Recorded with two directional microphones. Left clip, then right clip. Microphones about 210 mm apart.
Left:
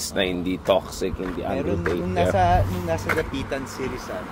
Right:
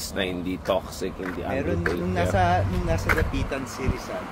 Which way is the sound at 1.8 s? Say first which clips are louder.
Left 3 dB; 5° left (ahead or behind).